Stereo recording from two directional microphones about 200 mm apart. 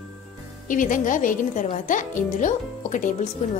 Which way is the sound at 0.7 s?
40° left (ahead or behind).